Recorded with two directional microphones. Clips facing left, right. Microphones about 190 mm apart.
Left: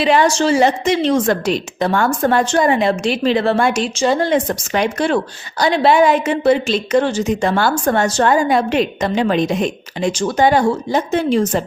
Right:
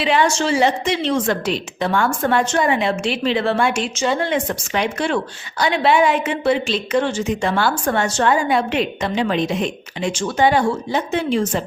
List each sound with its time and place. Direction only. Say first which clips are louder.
0.0 s a woman's voice: left 4 dB; 40° left (ahead or behind)